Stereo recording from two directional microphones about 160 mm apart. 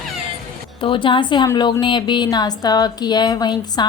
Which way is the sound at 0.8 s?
30° left (ahead or behind).